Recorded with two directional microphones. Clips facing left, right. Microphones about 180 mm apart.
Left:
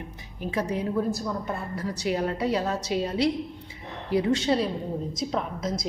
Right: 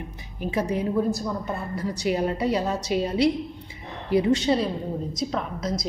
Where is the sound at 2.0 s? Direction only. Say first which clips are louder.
Right 2 dB; 10° right (ahead or behind).